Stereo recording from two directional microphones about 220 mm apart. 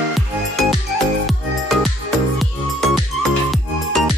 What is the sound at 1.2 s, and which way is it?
Music, centre (ahead or behind).